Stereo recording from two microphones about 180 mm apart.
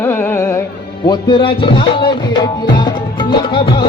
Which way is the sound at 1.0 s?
25° left (ahead or behind).